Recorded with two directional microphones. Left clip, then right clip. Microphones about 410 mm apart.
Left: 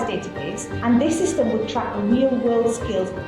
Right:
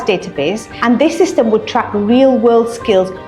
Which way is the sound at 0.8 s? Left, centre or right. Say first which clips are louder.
Right 8 dB; right.